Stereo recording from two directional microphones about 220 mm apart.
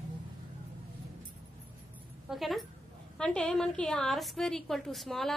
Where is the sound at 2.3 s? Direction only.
Centre (ahead or behind).